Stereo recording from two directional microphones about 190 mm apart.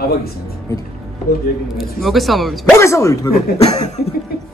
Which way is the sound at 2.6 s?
15° left (ahead or behind).